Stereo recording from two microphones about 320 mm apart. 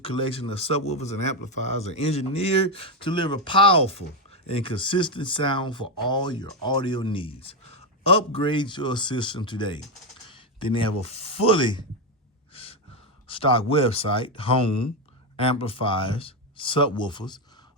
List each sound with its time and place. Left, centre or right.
0.0 s speech: centre
13.2 s speech: centre